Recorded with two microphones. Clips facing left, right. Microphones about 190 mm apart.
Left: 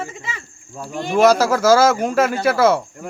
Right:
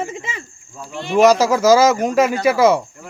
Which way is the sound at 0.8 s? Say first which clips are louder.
Left 3 dB; 45° left (ahead or behind).